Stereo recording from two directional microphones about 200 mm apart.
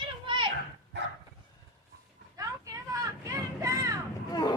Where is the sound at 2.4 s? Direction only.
15° right (ahead or behind).